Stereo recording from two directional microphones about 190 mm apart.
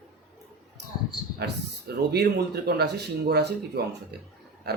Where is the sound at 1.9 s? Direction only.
55° right (ahead or behind).